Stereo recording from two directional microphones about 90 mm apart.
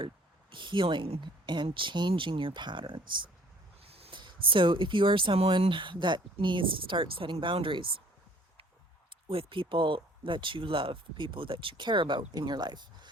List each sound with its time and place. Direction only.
0.5 s speech: 65° right (ahead or behind)
3.8 s speech: 90° right; by 8.0 s 70° right (ahead or behind)
9.3 s speech: 80° right; by 13.1 s 55° right (ahead or behind)